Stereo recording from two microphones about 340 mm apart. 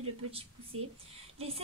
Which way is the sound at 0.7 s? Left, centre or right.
Right.